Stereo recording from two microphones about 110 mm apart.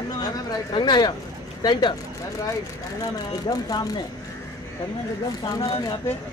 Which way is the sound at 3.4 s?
35° left (ahead or behind).